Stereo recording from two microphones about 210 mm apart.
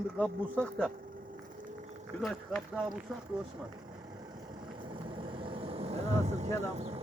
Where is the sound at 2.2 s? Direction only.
Centre (ahead or behind).